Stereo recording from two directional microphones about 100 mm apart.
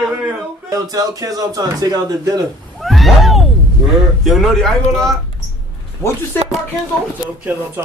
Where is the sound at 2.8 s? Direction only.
Centre (ahead or behind).